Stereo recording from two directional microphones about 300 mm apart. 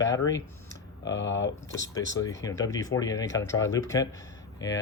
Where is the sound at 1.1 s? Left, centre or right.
Left.